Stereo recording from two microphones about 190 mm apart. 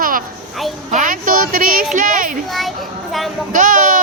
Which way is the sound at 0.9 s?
45° right (ahead or behind).